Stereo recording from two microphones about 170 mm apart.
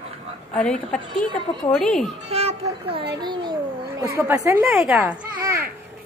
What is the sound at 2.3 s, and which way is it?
Children playing, 40° right (ahead or behind).